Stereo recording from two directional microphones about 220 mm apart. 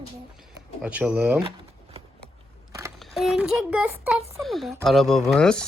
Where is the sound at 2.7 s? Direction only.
15° right (ahead or behind).